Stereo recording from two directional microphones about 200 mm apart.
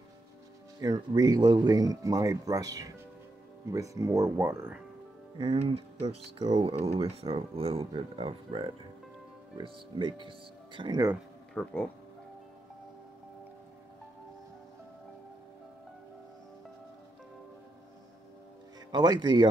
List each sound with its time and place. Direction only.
0.7 s speech: 20° right (ahead or behind)
5.4 s speech: 25° right (ahead or behind)
11.5 s speech: 5° left (ahead or behind)
18.9 s speech: 20° right (ahead or behind)